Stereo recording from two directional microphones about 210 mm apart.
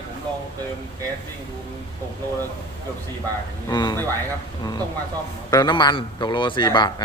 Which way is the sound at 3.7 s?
20° left (ahead or behind).